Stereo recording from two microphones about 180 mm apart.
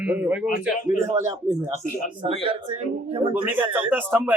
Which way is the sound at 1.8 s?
45° left (ahead or behind).